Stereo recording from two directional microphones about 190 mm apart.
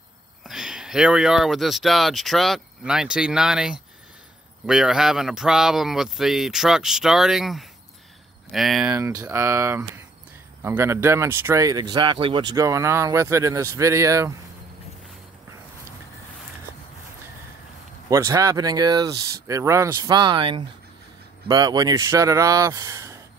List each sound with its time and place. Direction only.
0.5 s speech: 5° right (ahead or behind)
8.9 s speech: 15° right (ahead or behind)
18.1 s speech: 15° right (ahead or behind)